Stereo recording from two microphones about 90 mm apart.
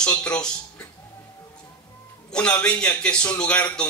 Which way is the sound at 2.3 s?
15° left (ahead or behind).